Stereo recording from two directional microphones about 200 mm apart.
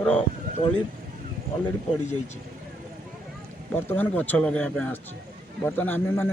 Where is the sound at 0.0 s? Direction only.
5° left (ahead or behind).